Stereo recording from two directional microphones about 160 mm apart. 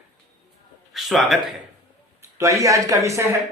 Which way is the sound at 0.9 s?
Centre (ahead or behind).